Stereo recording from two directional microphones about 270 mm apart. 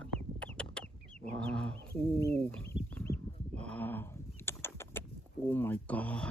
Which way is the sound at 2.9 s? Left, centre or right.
Centre.